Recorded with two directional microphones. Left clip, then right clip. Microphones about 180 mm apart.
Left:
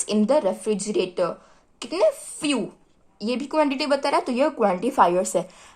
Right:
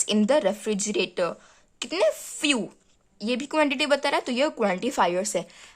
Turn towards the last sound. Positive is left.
turn(degrees=-25)  # may be behind; listen again after turning